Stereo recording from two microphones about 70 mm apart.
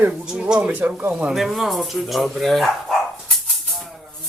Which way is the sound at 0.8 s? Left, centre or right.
Right.